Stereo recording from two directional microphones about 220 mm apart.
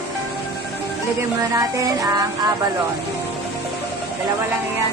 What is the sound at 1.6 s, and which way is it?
Music, 15° right (ahead or behind).